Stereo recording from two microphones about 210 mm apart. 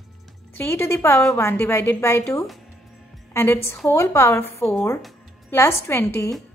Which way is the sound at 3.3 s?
10° left (ahead or behind).